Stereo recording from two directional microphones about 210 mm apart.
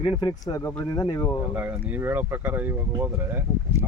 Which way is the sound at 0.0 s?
25° left (ahead or behind).